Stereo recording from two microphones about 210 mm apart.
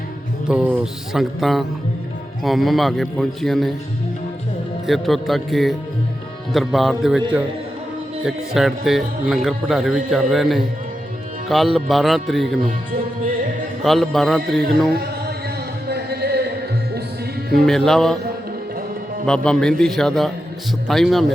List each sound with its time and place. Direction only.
0.4 s a man's voice: 5° right (ahead or behind)
4.9 s a man's voice: centre (ahead or behind)
8.2 s a man's voice: centre (ahead or behind)
13.8 s a man's voice: centre (ahead or behind)
15.9 s a sound: 50° right (ahead or behind)
17.7 s a man's voice: centre (ahead or behind)
19.2 s a man's voice: 5° left (ahead or behind)